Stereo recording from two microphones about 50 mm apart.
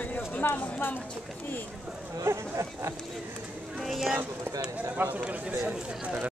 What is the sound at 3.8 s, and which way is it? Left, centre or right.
Speech, centre.